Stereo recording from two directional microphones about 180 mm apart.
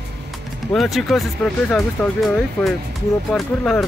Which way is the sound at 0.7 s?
Centre (ahead or behind).